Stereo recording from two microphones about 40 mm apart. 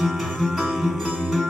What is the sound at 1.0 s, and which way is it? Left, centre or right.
Music, centre.